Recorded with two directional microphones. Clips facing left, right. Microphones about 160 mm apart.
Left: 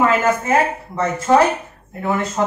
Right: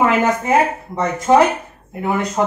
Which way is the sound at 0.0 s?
15° right (ahead or behind).